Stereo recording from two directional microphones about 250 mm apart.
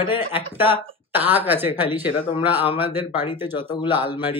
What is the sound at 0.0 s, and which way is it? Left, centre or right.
Speech, left.